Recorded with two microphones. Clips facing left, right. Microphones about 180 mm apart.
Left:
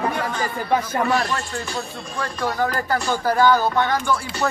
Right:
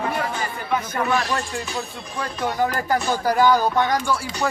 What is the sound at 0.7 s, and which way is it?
Speech, 35° left (ahead or behind).